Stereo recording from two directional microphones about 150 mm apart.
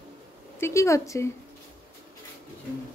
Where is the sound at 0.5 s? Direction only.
20° left (ahead or behind).